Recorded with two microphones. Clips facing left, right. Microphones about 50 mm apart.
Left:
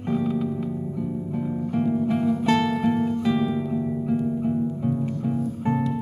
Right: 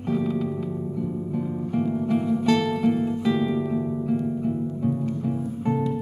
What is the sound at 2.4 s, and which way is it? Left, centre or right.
Guitar, centre.